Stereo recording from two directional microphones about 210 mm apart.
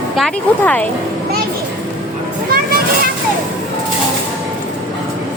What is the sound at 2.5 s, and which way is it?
Children playing, 45° right (ahead or behind).